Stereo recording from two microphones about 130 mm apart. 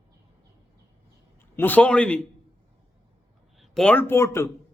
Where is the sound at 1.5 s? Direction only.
15° left (ahead or behind).